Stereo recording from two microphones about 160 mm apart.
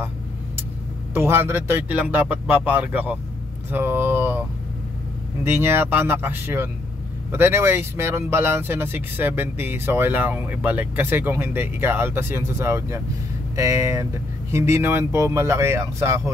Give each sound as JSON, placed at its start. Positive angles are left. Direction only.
{"t": 1.1, "sound": "speech", "side_deg": -15}